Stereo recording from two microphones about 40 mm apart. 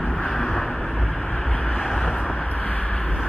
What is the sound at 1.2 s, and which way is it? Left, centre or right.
Vehicle, centre.